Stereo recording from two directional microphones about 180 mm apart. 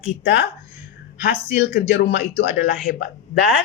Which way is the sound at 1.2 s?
65° left (ahead or behind).